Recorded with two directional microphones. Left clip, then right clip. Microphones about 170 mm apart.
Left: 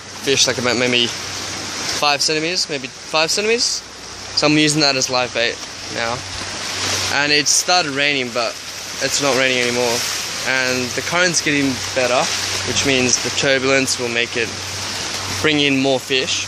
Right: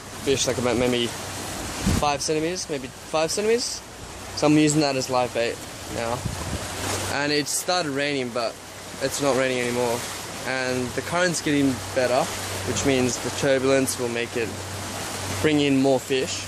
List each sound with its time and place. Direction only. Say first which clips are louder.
0.3 s speech: left 6 dB; 5° left (ahead or behind)
7.2 s speech: left 10 dB; 15° left (ahead or behind); by 16.4 s 5° right (ahead or behind)